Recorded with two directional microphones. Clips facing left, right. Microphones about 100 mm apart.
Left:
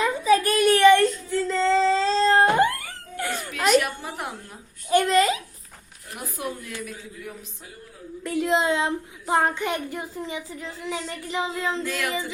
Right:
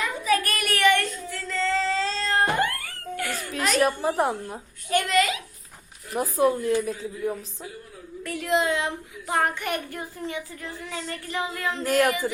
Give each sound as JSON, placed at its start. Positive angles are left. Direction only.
{"t": 0.0, "sound": "child singing", "side_deg": 25}
{"t": 3.8, "sound": "a woman's voice", "side_deg": -35}
{"t": 4.9, "sound": "a child's voice", "side_deg": 35}
{"t": 6.1, "sound": "a woman's voice", "side_deg": -35}
{"t": 8.2, "sound": "a woman's voice", "side_deg": 25}
{"t": 11.8, "sound": "a woman's voice", "side_deg": -40}